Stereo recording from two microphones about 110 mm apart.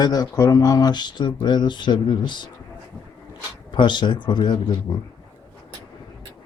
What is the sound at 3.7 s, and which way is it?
Speech, 45° left (ahead or behind).